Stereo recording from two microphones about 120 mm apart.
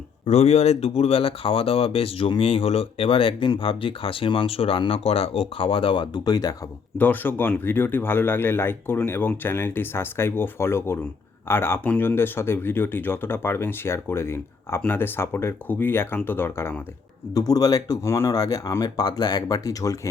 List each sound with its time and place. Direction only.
0.3 s speech: 65° left (ahead or behind); by 6.5 s 35° left (ahead or behind)
7.0 s speech: 15° left (ahead or behind)
17.3 s speech: 30° left (ahead or behind)